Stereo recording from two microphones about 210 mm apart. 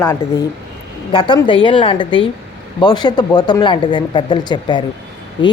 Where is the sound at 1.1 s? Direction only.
25° left (ahead or behind).